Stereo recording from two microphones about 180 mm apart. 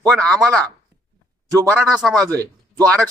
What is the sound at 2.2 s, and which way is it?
Speech, 20° right (ahead or behind).